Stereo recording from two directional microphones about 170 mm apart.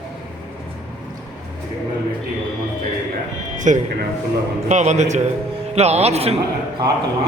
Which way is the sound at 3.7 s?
45° right (ahead or behind).